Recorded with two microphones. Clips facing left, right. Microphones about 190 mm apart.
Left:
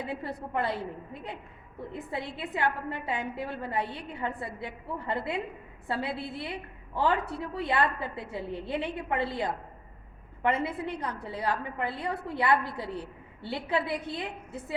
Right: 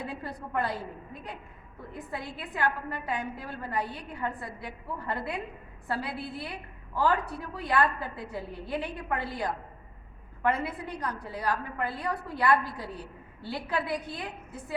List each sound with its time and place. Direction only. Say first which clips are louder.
0.1 s a woman's voice: left 2 dB; 25° left (ahead or behind)
1.9 s a woman's voice: left 2 dB; 25° left (ahead or behind)